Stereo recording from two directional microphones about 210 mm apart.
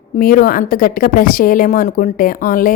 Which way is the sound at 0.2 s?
40° left (ahead or behind).